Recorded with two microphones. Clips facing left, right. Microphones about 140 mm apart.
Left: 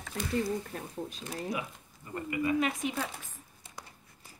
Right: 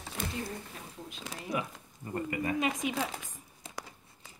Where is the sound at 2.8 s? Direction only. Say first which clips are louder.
Right 1 dB; 90° right.